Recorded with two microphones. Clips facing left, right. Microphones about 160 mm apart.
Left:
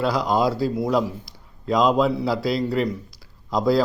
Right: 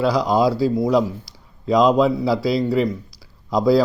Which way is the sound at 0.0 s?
Centre (ahead or behind).